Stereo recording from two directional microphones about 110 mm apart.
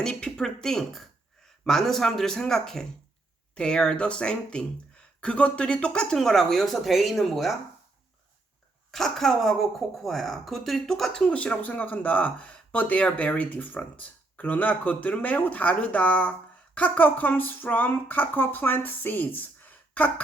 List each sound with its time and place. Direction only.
0.0 s speech: 5° left (ahead or behind)
8.9 s speech: 5° left (ahead or behind)